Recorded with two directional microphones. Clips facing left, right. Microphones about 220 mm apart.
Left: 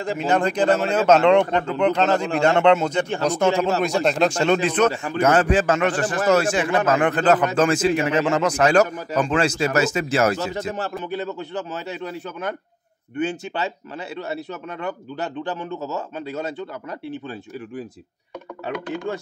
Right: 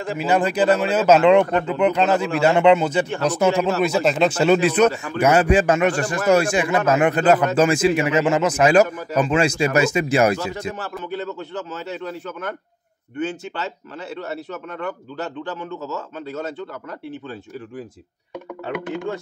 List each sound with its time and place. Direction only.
0.3 s a man's voice: 5° right (ahead or behind)
10.3 s a man's voice: 25° left (ahead or behind)
11.1 s speech: 15° left (ahead or behind)